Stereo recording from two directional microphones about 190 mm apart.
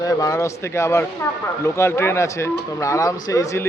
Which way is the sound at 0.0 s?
20° left (ahead or behind).